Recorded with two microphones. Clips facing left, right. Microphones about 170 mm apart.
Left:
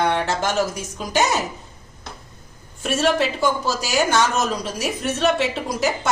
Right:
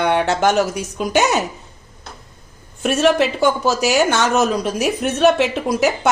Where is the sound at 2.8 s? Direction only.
65° right (ahead or behind).